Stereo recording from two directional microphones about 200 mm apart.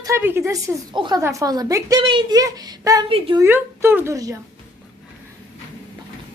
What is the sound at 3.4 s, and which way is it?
Speech, 10° right (ahead or behind).